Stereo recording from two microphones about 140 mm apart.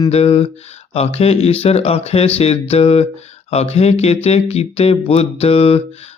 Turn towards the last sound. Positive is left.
turn(degrees=45)  # may be behind; listen again after turning